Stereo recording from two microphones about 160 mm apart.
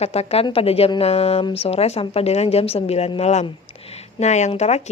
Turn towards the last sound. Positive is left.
turn(degrees=45)  # may be behind; listen again after turning